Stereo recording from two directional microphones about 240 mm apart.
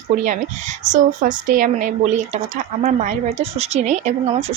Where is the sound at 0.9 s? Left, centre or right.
Right.